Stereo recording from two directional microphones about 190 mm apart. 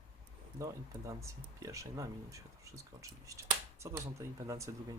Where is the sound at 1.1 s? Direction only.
15° right (ahead or behind).